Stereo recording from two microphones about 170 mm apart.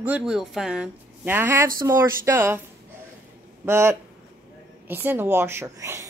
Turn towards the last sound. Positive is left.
turn(degrees=-15)  # may be behind; listen again after turning